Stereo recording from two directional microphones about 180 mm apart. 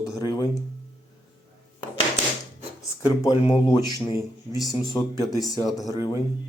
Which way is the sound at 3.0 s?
20° left (ahead or behind).